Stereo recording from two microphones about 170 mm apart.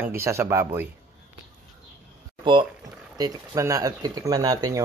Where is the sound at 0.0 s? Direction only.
15° right (ahead or behind).